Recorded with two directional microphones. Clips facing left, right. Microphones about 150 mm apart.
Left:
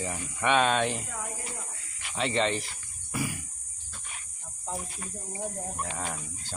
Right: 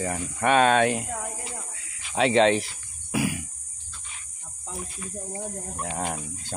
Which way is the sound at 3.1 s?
80° right.